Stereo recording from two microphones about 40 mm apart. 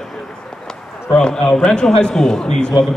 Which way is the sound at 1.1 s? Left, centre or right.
Left.